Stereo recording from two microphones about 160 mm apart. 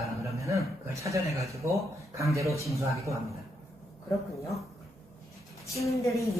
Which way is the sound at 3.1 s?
20° right (ahead or behind).